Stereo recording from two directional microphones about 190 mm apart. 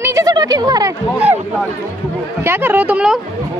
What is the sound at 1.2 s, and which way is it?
A woman's voice, 5° right (ahead or behind).